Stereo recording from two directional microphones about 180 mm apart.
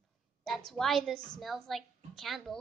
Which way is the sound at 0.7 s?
Centre (ahead or behind).